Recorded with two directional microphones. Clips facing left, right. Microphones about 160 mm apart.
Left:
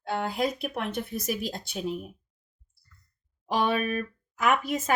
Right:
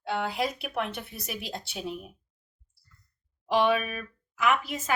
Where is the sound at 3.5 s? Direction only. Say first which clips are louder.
Right 1 dB; 45° left (ahead or behind).